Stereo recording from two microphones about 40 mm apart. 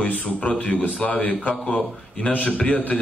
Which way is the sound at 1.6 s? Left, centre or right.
Left.